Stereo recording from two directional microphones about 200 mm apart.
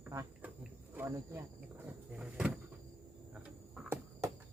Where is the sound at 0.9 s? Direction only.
10° right (ahead or behind).